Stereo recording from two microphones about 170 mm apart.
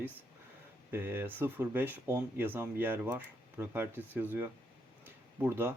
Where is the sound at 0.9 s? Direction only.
15° right (ahead or behind).